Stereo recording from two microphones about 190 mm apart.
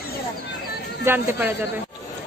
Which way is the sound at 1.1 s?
10° right (ahead or behind).